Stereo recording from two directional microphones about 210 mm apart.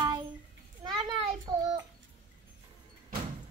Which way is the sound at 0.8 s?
20° right (ahead or behind).